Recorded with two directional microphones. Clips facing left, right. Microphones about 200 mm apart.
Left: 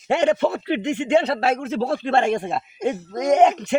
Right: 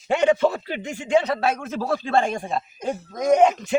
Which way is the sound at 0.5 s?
70° left (ahead or behind).